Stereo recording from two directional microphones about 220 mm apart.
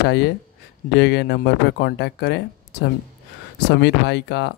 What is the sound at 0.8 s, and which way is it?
Speech, 50° left (ahead or behind).